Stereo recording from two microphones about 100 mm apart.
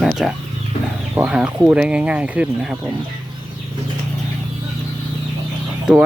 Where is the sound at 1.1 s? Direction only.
15° right (ahead or behind).